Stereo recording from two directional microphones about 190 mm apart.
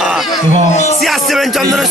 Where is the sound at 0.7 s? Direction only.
35° left (ahead or behind).